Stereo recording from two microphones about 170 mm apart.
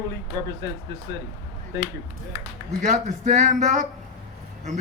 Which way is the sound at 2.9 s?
45° right (ahead or behind).